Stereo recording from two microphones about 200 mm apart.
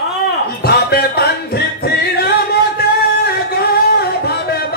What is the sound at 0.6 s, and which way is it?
Music, 50° left (ahead or behind).